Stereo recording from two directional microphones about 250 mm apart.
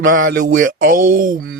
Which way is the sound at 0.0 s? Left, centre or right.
Right.